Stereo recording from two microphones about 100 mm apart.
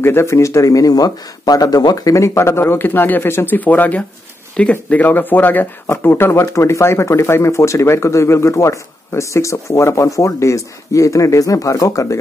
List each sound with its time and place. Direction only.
0.0 s speech: 25° left (ahead or behind)